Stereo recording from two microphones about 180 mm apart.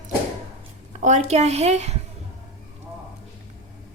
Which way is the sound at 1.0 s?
40° right (ahead or behind).